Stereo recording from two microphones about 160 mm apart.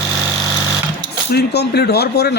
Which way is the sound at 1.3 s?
85° left.